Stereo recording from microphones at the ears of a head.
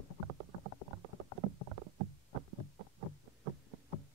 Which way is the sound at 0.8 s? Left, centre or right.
Right.